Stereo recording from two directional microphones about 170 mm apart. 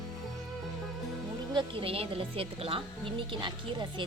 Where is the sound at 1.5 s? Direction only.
30° right (ahead or behind).